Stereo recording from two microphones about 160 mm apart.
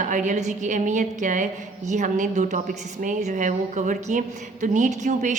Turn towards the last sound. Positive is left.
turn(degrees=-50)  # may be behind; listen again after turning